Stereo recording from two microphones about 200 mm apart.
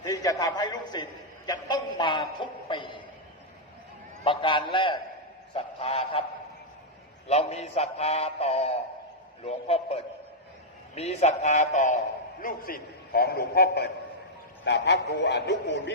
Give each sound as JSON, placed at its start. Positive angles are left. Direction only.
{"t": 0.0, "sound": "a sound", "side_deg": 15}
{"t": 4.2, "sound": "a man's voice", "side_deg": 25}
{"t": 5.5, "sound": "goose", "side_deg": 30}
{"t": 7.3, "sound": "a man's voice", "side_deg": 35}